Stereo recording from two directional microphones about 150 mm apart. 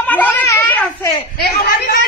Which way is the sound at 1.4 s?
90° left.